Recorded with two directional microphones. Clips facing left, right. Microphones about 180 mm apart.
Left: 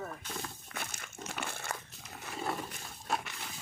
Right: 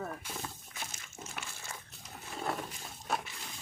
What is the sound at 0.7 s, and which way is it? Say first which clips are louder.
Crumpling: left 3 dB; 60° left (ahead or behind).